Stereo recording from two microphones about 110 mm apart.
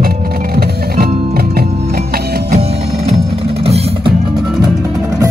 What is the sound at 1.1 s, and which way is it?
Music, 80° right.